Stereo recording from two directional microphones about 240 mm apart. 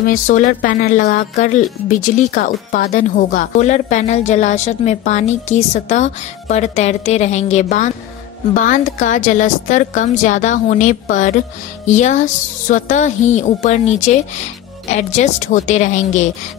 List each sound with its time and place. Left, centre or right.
0.0 s a woman's voice: left